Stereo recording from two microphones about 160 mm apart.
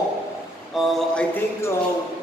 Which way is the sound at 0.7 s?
5° left (ahead or behind).